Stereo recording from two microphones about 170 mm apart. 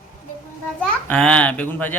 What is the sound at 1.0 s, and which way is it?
Speech, 5° left (ahead or behind).